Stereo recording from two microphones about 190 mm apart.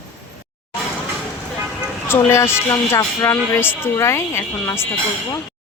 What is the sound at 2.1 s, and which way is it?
Speech, 15° left (ahead or behind).